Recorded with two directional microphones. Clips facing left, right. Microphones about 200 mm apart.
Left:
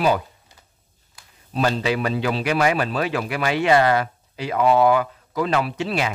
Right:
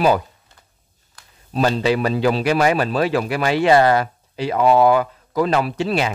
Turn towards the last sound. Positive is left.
turn(degrees=-40)  # may be behind; listen again after turning